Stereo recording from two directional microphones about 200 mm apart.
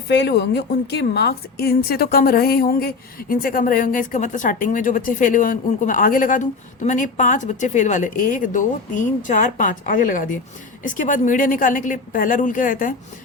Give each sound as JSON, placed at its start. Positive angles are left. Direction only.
{"t": 0.1, "sound": "a woman's voice", "side_deg": 60}